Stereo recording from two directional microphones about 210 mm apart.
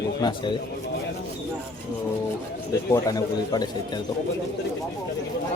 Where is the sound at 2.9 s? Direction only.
15° left (ahead or behind).